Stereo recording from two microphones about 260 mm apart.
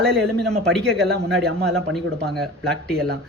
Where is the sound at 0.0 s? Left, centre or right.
Centre.